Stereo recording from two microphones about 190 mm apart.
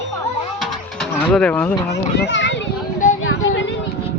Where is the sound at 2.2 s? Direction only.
70° left (ahead or behind).